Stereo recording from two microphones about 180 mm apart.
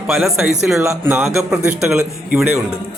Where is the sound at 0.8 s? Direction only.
15° right (ahead or behind).